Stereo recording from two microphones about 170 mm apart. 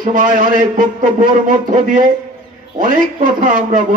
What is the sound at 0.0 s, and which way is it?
A man's voice, 50° right (ahead or behind).